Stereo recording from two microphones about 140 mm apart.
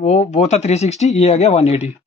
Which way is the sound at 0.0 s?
55° left (ahead or behind).